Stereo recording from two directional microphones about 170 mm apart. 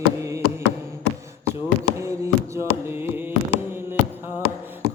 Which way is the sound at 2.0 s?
15° right (ahead or behind).